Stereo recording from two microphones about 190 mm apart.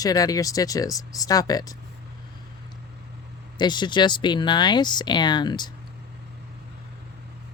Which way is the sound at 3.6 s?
25° left (ahead or behind).